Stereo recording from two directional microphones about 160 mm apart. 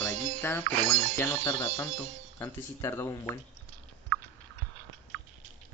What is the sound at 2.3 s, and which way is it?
Speech, 20° left (ahead or behind).